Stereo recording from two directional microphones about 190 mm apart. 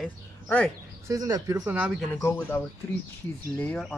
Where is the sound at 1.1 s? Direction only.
20° right (ahead or behind).